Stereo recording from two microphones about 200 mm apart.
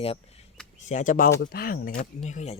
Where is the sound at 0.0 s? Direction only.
30° left (ahead or behind); by 1.9 s 45° left (ahead or behind).